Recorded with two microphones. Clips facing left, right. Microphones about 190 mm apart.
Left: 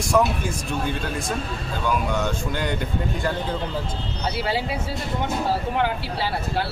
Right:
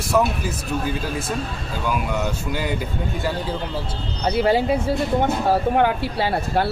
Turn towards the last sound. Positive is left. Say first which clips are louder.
# right 4 dB
turn(degrees=-50)  # may be behind; listen again after turning